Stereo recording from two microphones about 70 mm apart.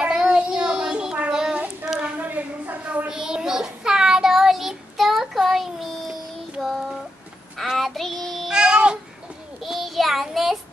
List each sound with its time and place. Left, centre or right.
0.0 s child singing: centre
1.9 s a sound: centre
2.1 s a sound: right
3.1 s child singing: centre
8.5 s babbling: centre
9.6 s child singing: centre